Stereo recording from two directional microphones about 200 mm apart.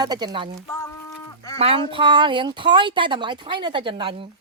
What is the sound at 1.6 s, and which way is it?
Speech, 30° right (ahead or behind).